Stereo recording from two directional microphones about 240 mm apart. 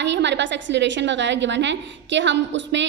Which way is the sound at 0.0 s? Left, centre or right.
Right.